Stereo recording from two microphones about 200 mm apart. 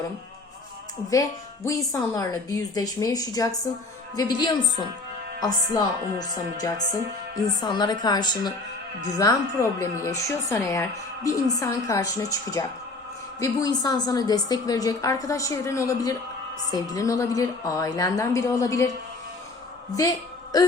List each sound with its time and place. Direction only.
1.1 s a woman's voice: 15° left (ahead or behind)